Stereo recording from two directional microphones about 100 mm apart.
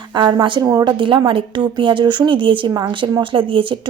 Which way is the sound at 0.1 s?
50° right (ahead or behind).